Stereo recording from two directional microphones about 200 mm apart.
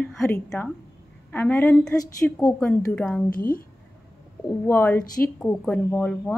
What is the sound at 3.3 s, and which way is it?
Speech, 45° left (ahead or behind).